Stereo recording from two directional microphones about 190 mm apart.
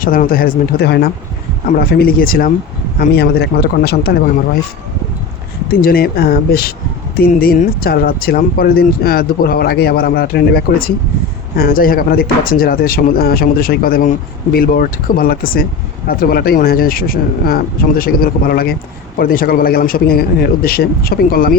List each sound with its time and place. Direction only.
0.0 s speech: 50° left (ahead or behind)
5.7 s speech: 50° left (ahead or behind)